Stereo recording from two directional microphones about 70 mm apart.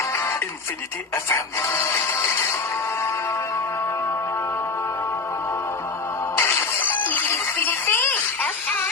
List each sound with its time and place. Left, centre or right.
1.1 s speech: left
6.3 s music: left